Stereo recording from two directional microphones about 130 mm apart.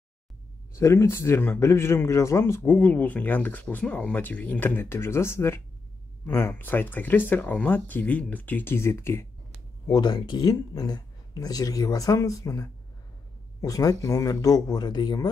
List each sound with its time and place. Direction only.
0.7 s speech: 20° left (ahead or behind)
9.8 s speech: 35° left (ahead or behind)